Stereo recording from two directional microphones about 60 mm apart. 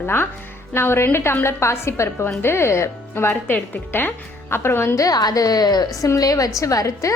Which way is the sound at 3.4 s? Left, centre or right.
Left.